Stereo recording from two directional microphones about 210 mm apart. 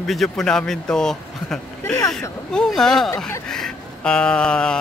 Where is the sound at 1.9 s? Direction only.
15° left (ahead or behind).